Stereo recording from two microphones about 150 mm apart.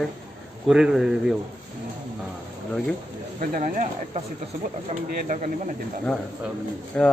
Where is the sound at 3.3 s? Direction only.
65° right (ahead or behind).